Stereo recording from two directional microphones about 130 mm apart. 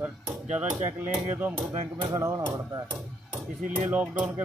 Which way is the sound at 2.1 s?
25° right (ahead or behind).